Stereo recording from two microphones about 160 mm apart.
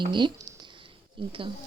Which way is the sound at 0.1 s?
25° right (ahead or behind).